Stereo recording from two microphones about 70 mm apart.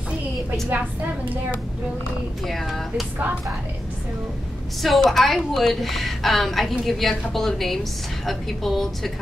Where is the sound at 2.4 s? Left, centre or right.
Centre.